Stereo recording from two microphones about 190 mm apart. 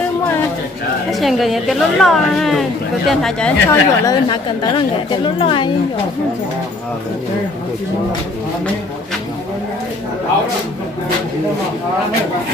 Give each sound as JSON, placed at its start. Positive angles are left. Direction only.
{"t": 1.2, "sound": "a woman's voice", "side_deg": 0}
{"t": 3.7, "sound": "a woman's voice", "side_deg": 20}